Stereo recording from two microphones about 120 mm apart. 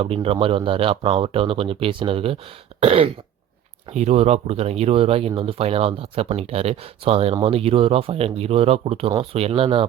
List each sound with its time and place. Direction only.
0.0 s speech: 50° right (ahead or behind)